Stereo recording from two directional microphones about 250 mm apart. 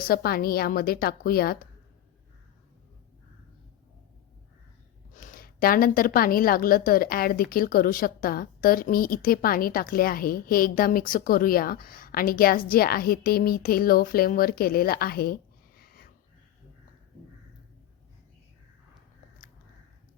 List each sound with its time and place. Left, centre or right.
0.1 s a woman's voice: left
5.1 s a woman's voice: left